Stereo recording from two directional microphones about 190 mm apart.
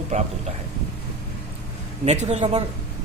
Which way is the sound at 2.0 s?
35° right (ahead or behind).